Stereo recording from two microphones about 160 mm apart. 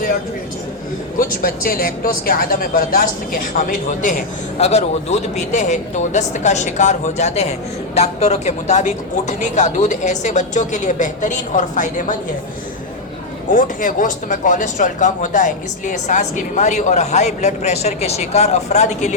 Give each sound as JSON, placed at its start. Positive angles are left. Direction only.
{"t": 1.2, "sound": "a woman's voice", "side_deg": 65}
{"t": 4.5, "sound": "speech", "side_deg": 45}
{"t": 13.5, "sound": "speech", "side_deg": 55}